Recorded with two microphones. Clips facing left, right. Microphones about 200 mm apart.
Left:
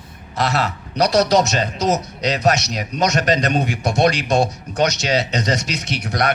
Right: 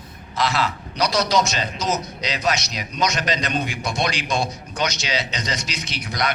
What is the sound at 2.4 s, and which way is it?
A man's voice, 45° left (ahead or behind).